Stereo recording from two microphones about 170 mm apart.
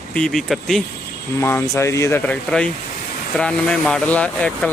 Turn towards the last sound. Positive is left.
turn(degrees=5)  # may be behind; listen again after turning